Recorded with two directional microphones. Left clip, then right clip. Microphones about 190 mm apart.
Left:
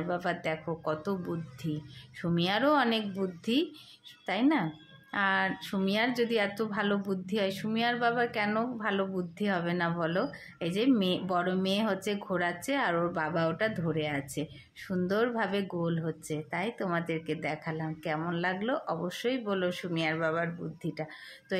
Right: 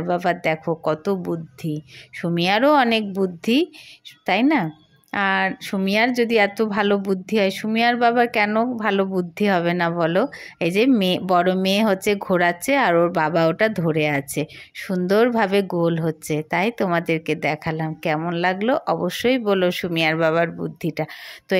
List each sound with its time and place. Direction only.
0.0 s a woman's voice: 40° right (ahead or behind)